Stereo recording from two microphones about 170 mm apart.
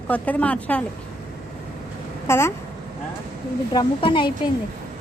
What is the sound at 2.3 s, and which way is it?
Speech, 15° left (ahead or behind).